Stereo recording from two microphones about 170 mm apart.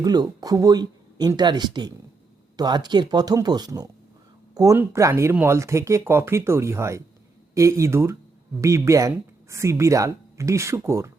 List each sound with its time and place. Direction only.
0.0 s speech: 20° right (ahead or behind)